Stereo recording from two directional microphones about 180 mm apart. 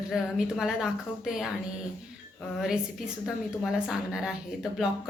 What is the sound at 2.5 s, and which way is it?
Speech, 5° right (ahead or behind).